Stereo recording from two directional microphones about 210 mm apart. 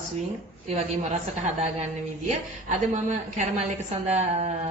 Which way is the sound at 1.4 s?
35° right (ahead or behind).